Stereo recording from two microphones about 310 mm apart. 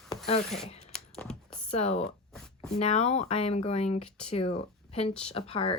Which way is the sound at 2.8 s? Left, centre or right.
Left.